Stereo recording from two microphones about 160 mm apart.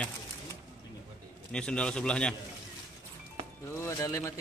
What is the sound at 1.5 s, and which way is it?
Speech, 5° left (ahead or behind).